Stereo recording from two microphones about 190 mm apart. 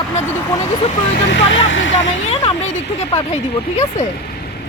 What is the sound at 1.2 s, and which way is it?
Speech, 75° left (ahead or behind).